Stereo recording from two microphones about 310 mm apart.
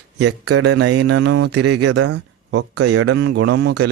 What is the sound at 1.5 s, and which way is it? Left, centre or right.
A man's voice, right.